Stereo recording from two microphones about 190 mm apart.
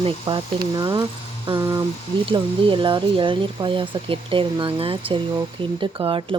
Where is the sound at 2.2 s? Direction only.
25° right (ahead or behind).